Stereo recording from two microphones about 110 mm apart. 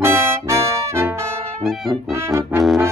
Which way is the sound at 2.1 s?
25° right (ahead or behind).